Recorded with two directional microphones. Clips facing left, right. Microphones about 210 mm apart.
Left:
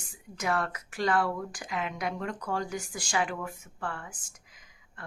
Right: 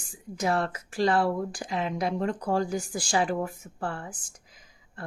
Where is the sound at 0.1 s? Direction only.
30° right (ahead or behind).